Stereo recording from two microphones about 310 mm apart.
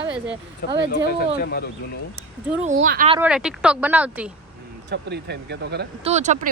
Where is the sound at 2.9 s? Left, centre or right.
Right.